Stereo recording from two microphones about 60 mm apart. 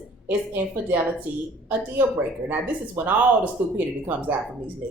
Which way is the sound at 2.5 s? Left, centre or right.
Right.